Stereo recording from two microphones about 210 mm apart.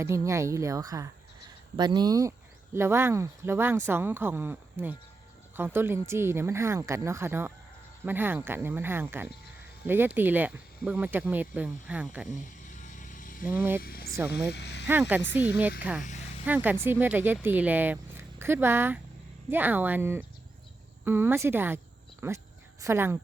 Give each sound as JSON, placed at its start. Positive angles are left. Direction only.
{"t": 0.0, "sound": "speech", "side_deg": -15}
{"t": 12.3, "sound": "a sound", "side_deg": 35}
{"t": 13.4, "sound": "speech", "side_deg": -10}
{"t": 13.8, "sound": "a sound", "side_deg": 45}
{"t": 14.5, "sound": "speech", "side_deg": 55}
{"t": 14.8, "sound": "speech", "side_deg": -10}